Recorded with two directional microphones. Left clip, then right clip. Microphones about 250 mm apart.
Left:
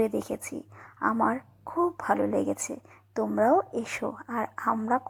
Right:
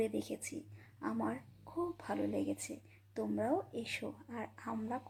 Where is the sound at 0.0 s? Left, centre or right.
Centre.